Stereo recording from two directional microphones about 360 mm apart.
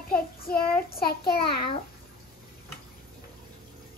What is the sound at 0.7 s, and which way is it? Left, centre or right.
Speech, left.